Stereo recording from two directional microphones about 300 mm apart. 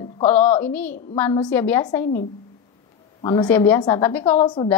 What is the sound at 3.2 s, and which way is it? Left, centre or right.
A woman's voice, centre.